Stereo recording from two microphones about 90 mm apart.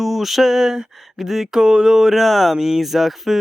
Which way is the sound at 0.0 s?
Centre (ahead or behind).